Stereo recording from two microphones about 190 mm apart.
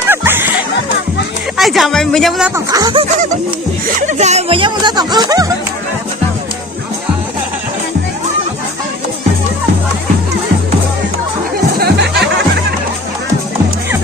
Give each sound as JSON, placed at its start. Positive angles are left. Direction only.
{"t": 0.1, "sound": "music", "side_deg": -10}
{"t": 1.5, "sound": "speech", "side_deg": 0}
{"t": 2.7, "sound": "speech", "side_deg": -20}
{"t": 4.0, "sound": "speech", "side_deg": -35}
{"t": 11.8, "sound": "music", "side_deg": -60}